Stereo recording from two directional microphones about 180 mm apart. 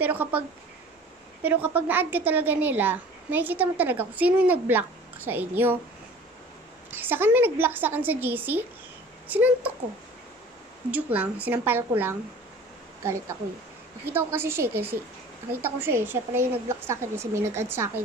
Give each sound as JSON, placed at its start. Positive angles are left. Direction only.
{"t": 0.0, "sound": "a woman's voice", "side_deg": -10}
{"t": 1.4, "sound": "a woman's voice", "side_deg": -10}
{"t": 6.9, "sound": "a woman's voice", "side_deg": -10}
{"t": 10.9, "sound": "a woman's voice", "side_deg": -10}